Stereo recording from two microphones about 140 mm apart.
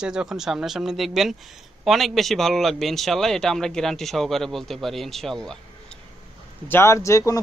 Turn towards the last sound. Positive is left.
turn(degrees=20)  # may be behind; listen again after turning